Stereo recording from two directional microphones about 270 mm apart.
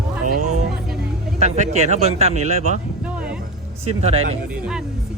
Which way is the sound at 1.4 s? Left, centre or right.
Right.